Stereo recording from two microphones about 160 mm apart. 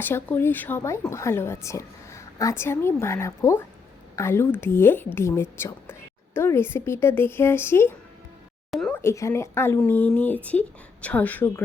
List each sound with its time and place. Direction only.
0.0 s a woman's voice: 15° left (ahead or behind)
8.7 s speech: centre (ahead or behind)
9.0 s a woman's voice: 15° left (ahead or behind)